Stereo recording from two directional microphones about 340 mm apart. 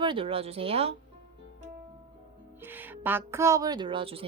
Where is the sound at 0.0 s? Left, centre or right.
Centre.